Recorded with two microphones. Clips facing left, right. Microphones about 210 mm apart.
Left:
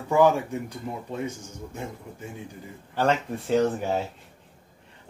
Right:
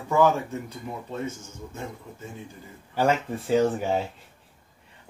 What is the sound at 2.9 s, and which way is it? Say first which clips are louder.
Speech: right 1 dB; 5° right (ahead or behind).